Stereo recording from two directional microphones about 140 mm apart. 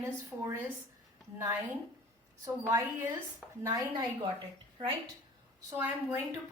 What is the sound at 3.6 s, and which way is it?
Speech, 25° right (ahead or behind).